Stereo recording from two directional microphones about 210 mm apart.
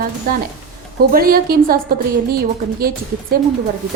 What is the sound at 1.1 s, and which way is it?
A woman's voice, 45° right (ahead or behind).